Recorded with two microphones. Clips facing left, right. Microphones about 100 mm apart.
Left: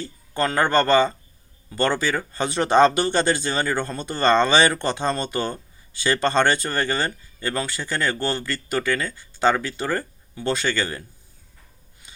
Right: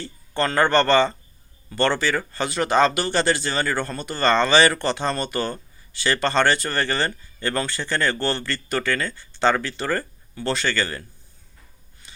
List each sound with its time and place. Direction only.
0.0 s speech: 10° left (ahead or behind)